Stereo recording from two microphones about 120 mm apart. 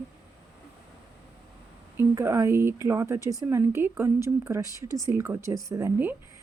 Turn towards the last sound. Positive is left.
turn(degrees=-20)  # may be behind; listen again after turning